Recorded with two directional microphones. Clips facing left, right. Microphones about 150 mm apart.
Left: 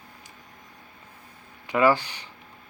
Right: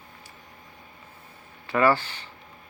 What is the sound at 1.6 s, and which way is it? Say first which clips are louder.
Speech: left 1 dB; 15° left (ahead or behind).